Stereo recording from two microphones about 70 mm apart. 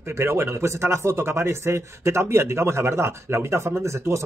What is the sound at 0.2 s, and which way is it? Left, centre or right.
Speech, right.